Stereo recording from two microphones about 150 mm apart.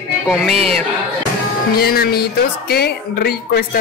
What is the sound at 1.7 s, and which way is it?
Speech, 90° left.